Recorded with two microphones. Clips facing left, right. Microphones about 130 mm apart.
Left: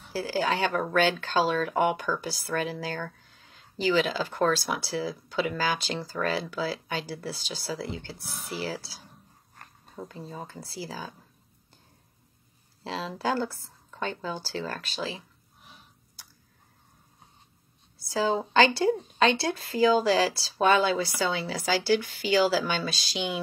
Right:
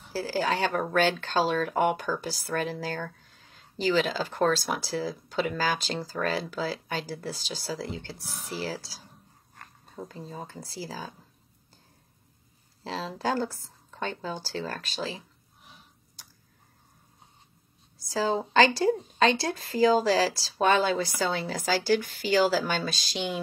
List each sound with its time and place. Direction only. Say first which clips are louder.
0.1 s speech: even; 40° right (ahead or behind)
3.1 s a sound: even; 45° left (ahead or behind)
3.3 s a sound: even; 40° right (ahead or behind)
3.8 s speech: even; 40° right (ahead or behind)
12.8 s a woman's voice: even; 35° right (ahead or behind)
18.0 s a woman's voice: left 1 dB; 40° right (ahead or behind)